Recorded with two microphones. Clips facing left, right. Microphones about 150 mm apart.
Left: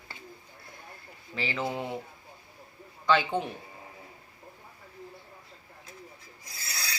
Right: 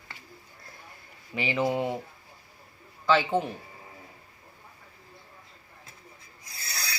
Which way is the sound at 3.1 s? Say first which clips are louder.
Right 2 dB; 5° right (ahead or behind).